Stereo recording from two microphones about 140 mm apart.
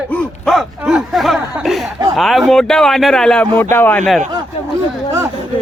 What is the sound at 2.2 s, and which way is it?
Speech, centre (ahead or behind).